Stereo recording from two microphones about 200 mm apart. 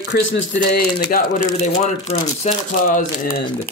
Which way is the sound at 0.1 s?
70° left (ahead or behind).